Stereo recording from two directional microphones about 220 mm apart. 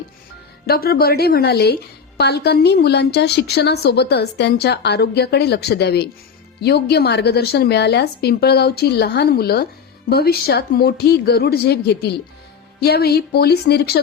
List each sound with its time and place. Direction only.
0.7 s a woman's voice: 45° left (ahead or behind)